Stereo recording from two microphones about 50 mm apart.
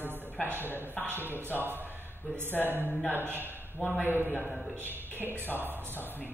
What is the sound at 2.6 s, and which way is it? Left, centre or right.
Speech, right.